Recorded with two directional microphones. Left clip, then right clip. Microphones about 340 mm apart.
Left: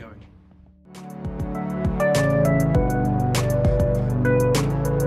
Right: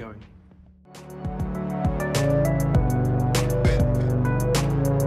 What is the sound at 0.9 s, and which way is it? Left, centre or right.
Music, centre.